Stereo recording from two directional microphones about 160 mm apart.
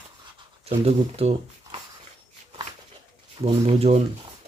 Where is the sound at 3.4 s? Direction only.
40° right (ahead or behind).